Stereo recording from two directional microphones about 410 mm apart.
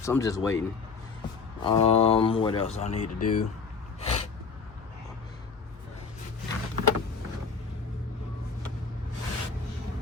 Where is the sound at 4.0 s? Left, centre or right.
Centre.